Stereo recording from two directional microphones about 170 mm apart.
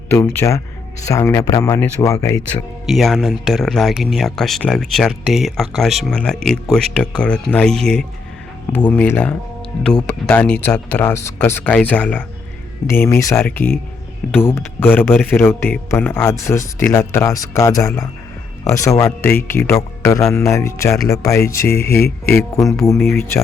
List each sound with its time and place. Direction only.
0.1 s speech: 15° left (ahead or behind)
2.8 s speech: centre (ahead or behind); by 21.8 s 15° left (ahead or behind)
21.8 s speech: 70° left (ahead or behind)
22.3 s speech: 15° left (ahead or behind)